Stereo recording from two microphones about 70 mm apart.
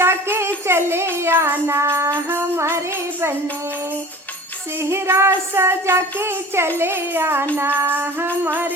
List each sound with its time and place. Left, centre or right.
0.0 s child singing: right
4.8 s child singing: right